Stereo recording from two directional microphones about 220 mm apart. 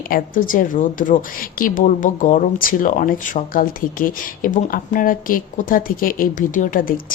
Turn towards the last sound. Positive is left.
turn(degrees=40)  # may be behind; listen again after turning